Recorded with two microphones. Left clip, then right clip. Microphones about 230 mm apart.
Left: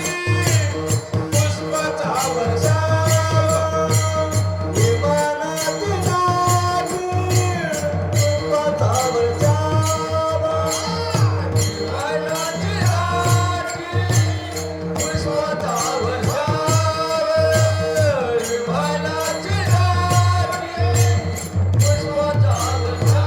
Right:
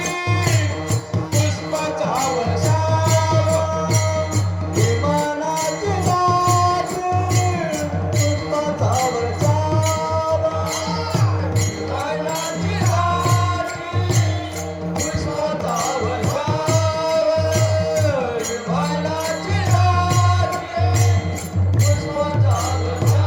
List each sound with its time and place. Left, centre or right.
1.7 s music: left
5.0 s music: left
8.2 s music: left
13.0 s music: left
15.4 s music: left